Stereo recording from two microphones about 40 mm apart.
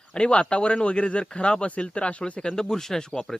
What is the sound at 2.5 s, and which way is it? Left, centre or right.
Speech, centre.